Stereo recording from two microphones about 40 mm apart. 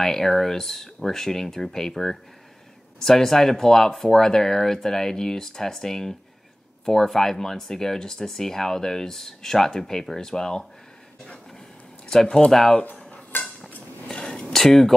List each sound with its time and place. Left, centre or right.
0.0 s speech: centre
12.1 s speech: centre
13.3 s dishes: left
14.2 s a sound: centre